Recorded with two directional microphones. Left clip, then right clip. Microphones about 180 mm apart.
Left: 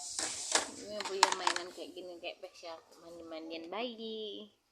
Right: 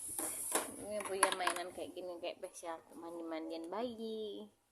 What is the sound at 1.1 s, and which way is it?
Speech, 10° right (ahead or behind).